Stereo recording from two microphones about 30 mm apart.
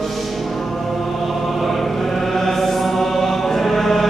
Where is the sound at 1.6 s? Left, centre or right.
Centre.